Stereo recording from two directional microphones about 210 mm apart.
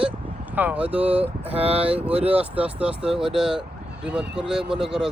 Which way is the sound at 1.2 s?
30° right (ahead or behind).